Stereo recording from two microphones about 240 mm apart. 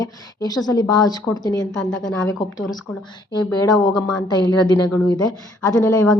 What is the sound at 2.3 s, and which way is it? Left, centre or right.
Speech, centre.